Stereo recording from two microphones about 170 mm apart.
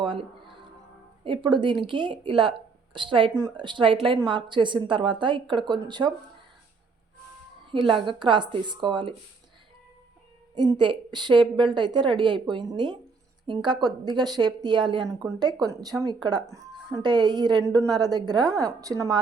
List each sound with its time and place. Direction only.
0.0 s music: 30° right (ahead or behind)
1.2 s speech: 30° right (ahead or behind)
7.7 s a woman's voice: 30° right (ahead or behind)
10.5 s speech: 25° right (ahead or behind)